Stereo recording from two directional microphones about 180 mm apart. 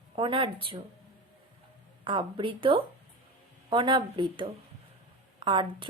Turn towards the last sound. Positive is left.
turn(degrees=-25)  # may be behind; listen again after turning